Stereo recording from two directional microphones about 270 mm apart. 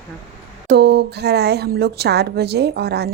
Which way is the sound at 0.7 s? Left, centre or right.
Right.